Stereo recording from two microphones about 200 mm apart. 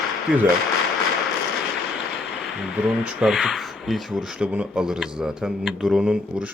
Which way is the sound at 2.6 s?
5° right (ahead or behind).